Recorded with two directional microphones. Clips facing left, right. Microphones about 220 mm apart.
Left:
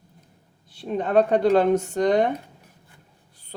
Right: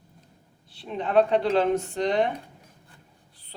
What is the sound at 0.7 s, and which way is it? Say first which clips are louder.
Speech: left 3 dB; 45° left (ahead or behind).